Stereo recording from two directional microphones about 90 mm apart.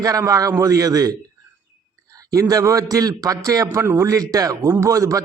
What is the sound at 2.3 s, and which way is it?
A man's voice, 40° right (ahead or behind).